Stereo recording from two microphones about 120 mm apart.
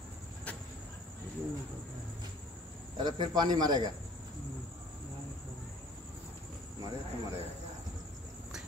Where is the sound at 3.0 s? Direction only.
35° right (ahead or behind).